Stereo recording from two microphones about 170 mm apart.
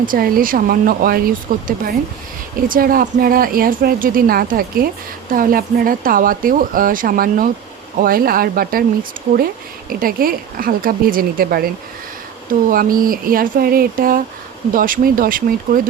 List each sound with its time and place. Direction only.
0.0 s a woman's voice: 55° right (ahead or behind)